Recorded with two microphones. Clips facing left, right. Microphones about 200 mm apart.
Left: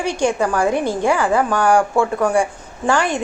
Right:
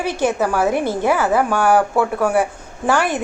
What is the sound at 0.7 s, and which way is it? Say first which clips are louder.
Speech: even; 15° left (ahead or behind).